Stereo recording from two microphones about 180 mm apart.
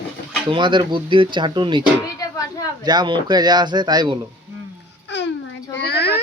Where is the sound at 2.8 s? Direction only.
25° right (ahead or behind).